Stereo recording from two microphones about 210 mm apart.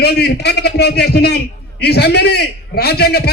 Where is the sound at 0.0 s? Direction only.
50° left (ahead or behind).